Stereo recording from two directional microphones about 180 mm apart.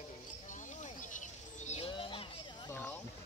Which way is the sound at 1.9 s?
30° left (ahead or behind).